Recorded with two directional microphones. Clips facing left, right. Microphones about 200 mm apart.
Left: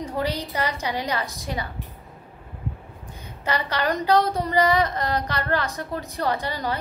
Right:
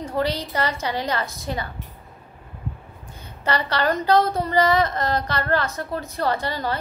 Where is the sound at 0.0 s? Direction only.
15° left (ahead or behind).